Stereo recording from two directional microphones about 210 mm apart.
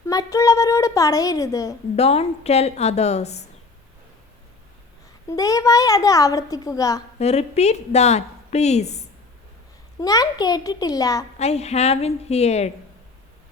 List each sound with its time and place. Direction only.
0.0 s speech: 15° left (ahead or behind)
2.0 s a woman's voice: 30° left (ahead or behind)
5.3 s speech: 15° left (ahead or behind)
7.2 s a woman's voice: 30° left (ahead or behind)
10.0 s speech: 15° left (ahead or behind)
11.3 s a woman's voice: 30° left (ahead or behind)